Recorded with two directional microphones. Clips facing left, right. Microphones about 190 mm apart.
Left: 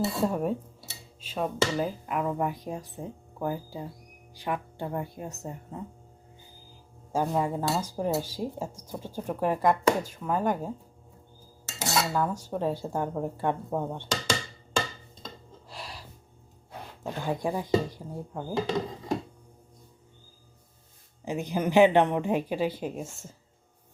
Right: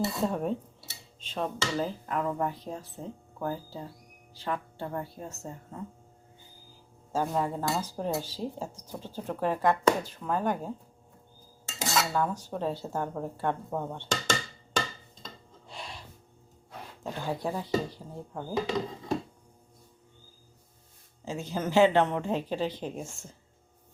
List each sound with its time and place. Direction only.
0.0 s speech: 5° left (ahead or behind)
7.1 s speech: 10° left (ahead or behind)
11.8 s speech: 10° left (ahead or behind)
15.7 s gasp: centre (ahead or behind)
17.0 s speech: 15° left (ahead or behind)
21.2 s speech: 15° left (ahead or behind)